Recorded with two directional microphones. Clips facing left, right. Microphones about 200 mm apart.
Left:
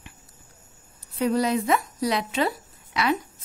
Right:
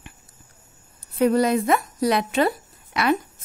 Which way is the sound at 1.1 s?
55° right (ahead or behind).